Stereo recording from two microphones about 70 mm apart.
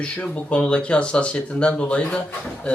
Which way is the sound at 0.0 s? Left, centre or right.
Centre.